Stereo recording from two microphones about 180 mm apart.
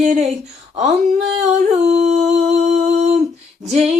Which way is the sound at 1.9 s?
40° right (ahead or behind).